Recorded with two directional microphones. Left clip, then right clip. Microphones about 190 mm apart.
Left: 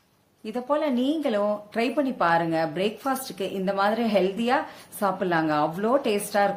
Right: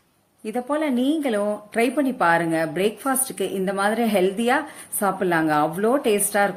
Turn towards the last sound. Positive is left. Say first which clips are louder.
# right 3 dB
turn(degrees=-10)  # may be behind; listen again after turning